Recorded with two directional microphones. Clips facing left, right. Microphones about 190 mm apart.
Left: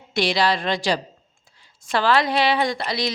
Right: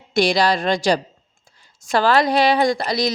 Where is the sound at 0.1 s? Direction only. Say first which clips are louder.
Right 4 dB; 45° right (ahead or behind).